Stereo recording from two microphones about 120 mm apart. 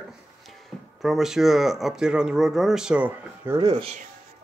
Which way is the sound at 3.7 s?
60° right (ahead or behind).